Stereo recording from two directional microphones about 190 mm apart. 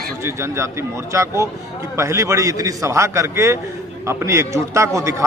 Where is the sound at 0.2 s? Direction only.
15° right (ahead or behind).